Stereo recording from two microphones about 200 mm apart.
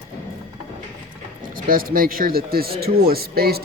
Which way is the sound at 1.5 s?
45° right (ahead or behind).